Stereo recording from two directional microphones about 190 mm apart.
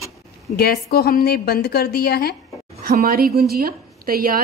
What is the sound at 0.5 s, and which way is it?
A woman's voice, 55° left (ahead or behind).